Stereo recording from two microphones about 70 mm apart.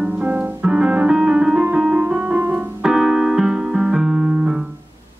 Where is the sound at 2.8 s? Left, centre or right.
Centre.